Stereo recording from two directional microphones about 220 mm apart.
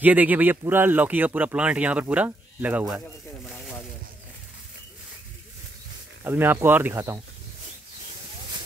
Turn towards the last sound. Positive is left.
turn(degrees=-10)  # may be behind; listen again after turning